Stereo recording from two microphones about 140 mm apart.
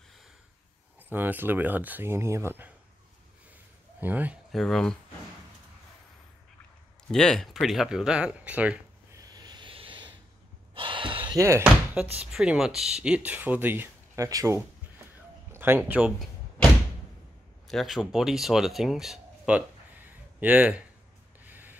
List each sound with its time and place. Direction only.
1.0 s speech: 15° right (ahead or behind)
4.0 s speech: 10° right (ahead or behind)
4.5 s speech: centre (ahead or behind)
7.1 s speech: 5° left (ahead or behind)
9.1 s a sound: 30° right (ahead or behind)
10.7 s gasp: 35° right (ahead or behind)
11.3 s speech: 20° right (ahead or behind)
11.9 s speech: 10° right (ahead or behind)
17.6 s speech: centre (ahead or behind)
20.1 s a sound: 10° right (ahead or behind)
21.5 s spray: 15° right (ahead or behind)